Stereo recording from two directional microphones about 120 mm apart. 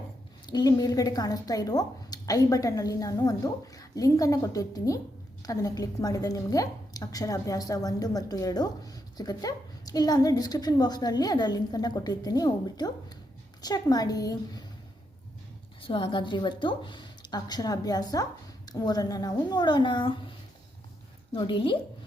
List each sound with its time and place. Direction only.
0.4 s a woman's voice: 35° left (ahead or behind)
15.8 s a woman's voice: 45° left (ahead or behind)
21.3 s speech: 45° left (ahead or behind)